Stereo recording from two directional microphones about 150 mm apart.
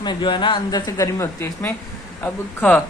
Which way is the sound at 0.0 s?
30° left (ahead or behind).